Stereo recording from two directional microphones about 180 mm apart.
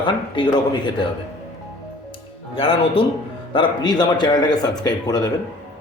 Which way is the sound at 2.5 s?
30° left (ahead or behind).